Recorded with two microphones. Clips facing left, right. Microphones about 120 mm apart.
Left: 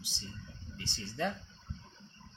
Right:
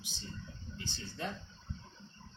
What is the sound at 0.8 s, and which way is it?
Speech, 65° left (ahead or behind).